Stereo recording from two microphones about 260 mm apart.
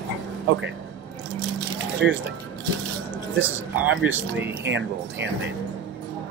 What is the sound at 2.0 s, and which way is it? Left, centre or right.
Speech, right.